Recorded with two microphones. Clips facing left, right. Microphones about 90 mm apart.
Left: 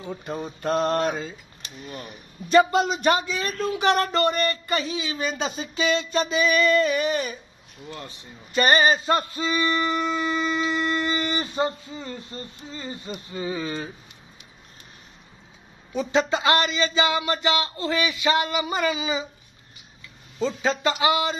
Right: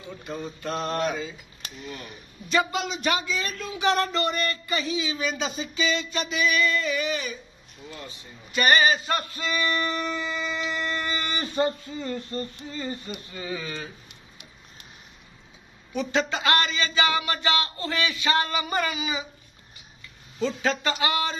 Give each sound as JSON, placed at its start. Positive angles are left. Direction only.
{"t": 0.0, "sound": "mantra", "side_deg": 40}
{"t": 2.5, "sound": "speech", "side_deg": 40}
{"t": 6.1, "sound": "speech", "side_deg": 35}
{"t": 8.5, "sound": "speech", "side_deg": 35}
{"t": 15.9, "sound": "speech", "side_deg": 20}
{"t": 20.3, "sound": "speech", "side_deg": 20}